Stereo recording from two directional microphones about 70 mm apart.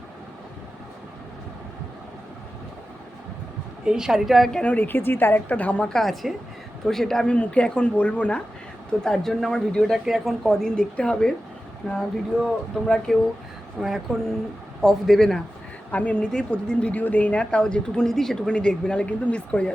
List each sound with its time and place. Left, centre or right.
3.8 s a woman's voice: centre
4.6 s a woman's voice: left
5.8 s a woman's voice: centre
8.9 s a woman's voice: centre
15.9 s a woman's voice: left